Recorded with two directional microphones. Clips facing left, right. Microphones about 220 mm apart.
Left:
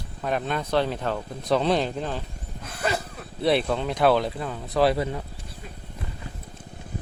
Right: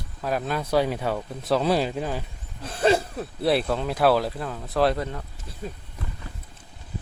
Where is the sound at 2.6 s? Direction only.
30° right (ahead or behind).